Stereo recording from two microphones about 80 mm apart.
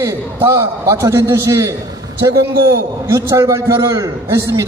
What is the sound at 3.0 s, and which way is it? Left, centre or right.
A man's voice, right.